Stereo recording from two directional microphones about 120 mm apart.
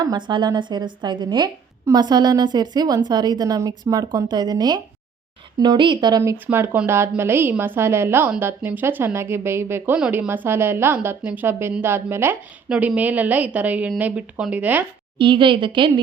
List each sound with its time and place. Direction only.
0.0 s a woman's voice: 35° right (ahead or behind)
6.2 s a woman's voice: 15° right (ahead or behind)
15.2 s a woman's voice: 45° right (ahead or behind)